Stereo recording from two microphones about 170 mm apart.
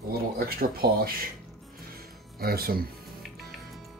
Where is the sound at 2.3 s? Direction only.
65° right (ahead or behind).